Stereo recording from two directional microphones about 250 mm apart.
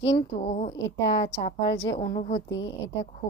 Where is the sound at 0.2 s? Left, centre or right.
Left.